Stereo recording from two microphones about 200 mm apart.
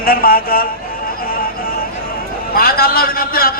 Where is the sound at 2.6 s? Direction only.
50° left (ahead or behind).